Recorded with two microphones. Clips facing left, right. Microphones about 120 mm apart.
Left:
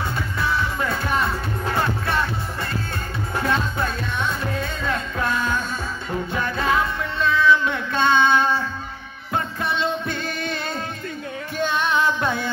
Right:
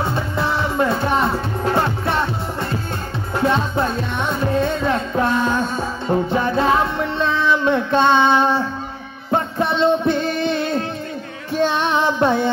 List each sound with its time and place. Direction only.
0.0 s music: 30° right (ahead or behind)
3.4 s music: 25° right (ahead or behind)
11.8 s music: 25° right (ahead or behind)